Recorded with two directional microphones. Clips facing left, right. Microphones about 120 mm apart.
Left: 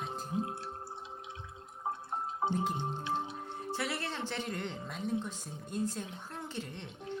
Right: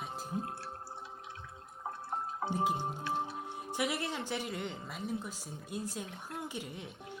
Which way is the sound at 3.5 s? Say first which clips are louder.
Right 2 dB; 15° right (ahead or behind).